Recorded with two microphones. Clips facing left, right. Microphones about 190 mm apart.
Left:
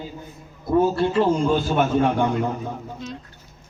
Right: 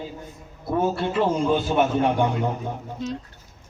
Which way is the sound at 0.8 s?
20° right (ahead or behind).